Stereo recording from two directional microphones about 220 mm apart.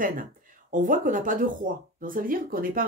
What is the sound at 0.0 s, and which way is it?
Speech, 40° right (ahead or behind).